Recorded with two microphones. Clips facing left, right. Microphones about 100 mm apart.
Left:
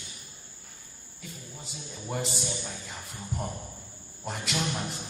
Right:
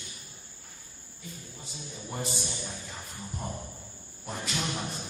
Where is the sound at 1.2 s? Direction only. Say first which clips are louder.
Left 1 dB; 85° left.